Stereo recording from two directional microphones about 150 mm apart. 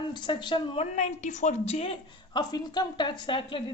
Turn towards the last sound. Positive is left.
turn(degrees=35)  # may be behind; listen again after turning